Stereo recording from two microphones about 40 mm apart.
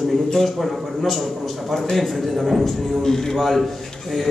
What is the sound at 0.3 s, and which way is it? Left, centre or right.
A man's voice, centre.